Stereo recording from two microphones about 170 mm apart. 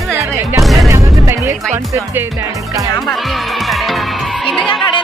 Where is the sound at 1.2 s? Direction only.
15° right (ahead or behind).